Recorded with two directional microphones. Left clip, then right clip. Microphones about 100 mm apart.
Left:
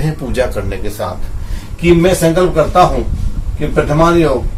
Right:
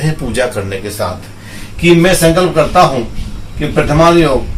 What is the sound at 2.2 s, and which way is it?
Speech, 10° left (ahead or behind).